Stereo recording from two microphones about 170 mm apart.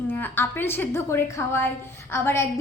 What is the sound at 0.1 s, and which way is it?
A woman's voice, 10° left (ahead or behind).